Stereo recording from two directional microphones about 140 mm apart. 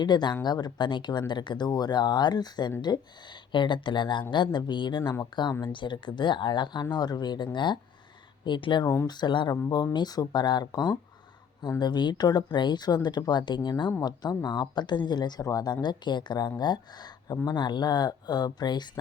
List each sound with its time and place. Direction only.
0.0 s speech: 30° left (ahead or behind)